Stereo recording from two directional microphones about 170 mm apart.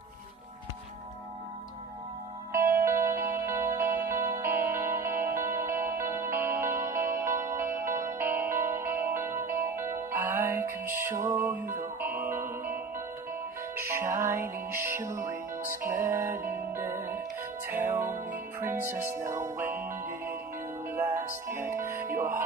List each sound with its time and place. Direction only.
2.5 s music: 15° right (ahead or behind)